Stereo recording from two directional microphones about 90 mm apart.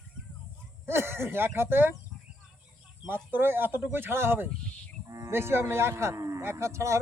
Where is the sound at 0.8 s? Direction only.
30° right (ahead or behind).